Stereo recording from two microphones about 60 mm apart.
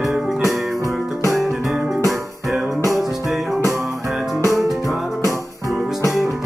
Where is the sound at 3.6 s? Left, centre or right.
Right.